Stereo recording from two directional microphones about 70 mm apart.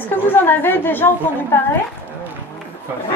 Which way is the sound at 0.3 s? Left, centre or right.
Left.